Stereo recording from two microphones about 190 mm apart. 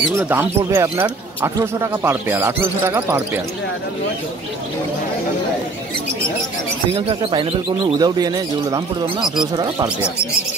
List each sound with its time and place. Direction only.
0.2 s speech: 10° right (ahead or behind)
7.0 s speech: 30° right (ahead or behind)